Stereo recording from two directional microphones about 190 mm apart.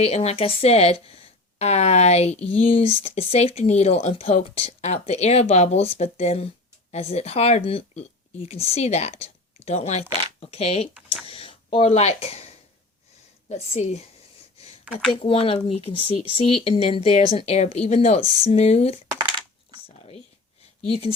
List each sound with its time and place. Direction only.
0.0 s speech: 35° left (ahead or behind)
13.5 s speech: 35° left (ahead or behind)
15.2 s speech: 30° left (ahead or behind)